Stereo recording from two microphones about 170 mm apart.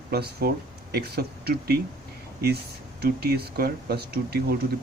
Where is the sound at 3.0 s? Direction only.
70° right (ahead or behind).